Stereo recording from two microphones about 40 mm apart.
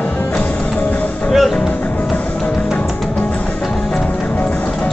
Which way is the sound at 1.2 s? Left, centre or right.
Centre.